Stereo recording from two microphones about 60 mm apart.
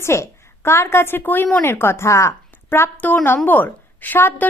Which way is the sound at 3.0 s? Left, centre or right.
Left.